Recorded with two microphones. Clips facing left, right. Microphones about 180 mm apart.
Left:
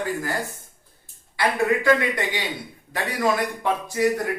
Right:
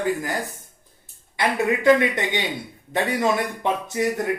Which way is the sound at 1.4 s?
20° right (ahead or behind).